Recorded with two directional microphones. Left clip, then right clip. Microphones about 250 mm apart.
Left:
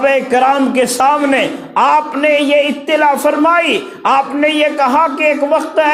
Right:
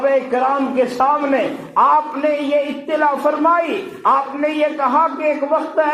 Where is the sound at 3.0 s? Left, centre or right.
Left.